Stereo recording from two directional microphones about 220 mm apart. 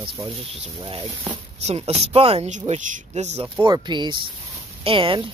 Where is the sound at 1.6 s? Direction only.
30° right (ahead or behind).